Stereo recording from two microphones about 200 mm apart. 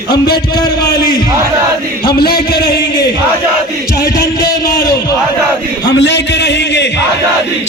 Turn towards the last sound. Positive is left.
turn(degrees=60)  # may be behind; listen again after turning